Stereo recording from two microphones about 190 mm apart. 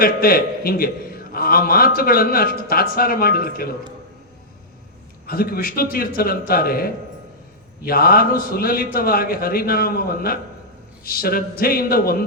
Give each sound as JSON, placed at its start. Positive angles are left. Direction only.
{"t": 0.0, "sound": "a man's voice", "side_deg": 50}
{"t": 5.2, "sound": "a man's voice", "side_deg": 50}